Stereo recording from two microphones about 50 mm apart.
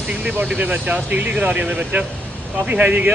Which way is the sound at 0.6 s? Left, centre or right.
Right.